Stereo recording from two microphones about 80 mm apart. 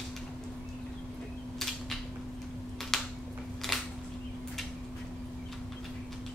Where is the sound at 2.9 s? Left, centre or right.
Centre.